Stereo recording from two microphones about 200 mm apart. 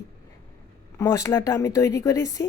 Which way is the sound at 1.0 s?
15° left (ahead or behind).